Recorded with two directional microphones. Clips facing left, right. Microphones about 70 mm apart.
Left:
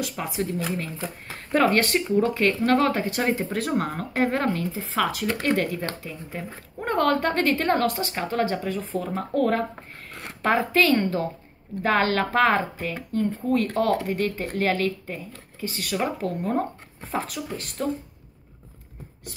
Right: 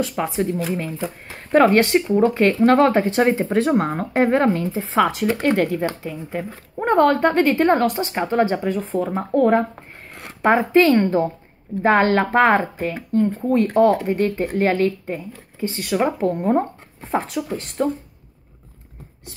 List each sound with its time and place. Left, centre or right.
0.0 s speech: right
0.9 s speech: centre
1.5 s speech: centre
17.4 s speech: centre